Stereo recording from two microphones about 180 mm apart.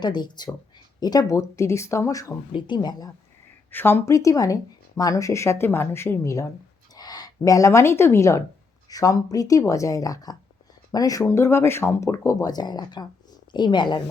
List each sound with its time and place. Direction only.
0.0 s speech: 25° left (ahead or behind)
3.7 s speech: 10° left (ahead or behind)